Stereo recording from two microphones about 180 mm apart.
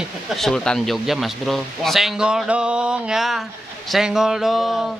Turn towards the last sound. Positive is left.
turn(degrees=0)  # may be behind; listen again after turning